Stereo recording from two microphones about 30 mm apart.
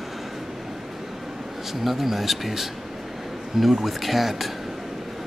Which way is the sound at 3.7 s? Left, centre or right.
Centre.